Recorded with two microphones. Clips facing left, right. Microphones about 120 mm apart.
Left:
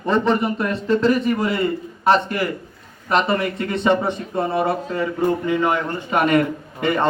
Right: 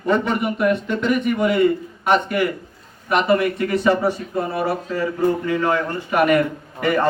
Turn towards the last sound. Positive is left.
turn(degrees=25)  # may be behind; listen again after turning